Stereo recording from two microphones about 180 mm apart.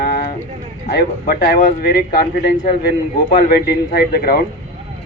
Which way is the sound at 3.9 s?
55° left (ahead or behind).